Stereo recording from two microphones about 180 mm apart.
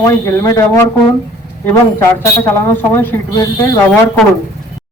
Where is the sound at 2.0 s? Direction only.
15° left (ahead or behind).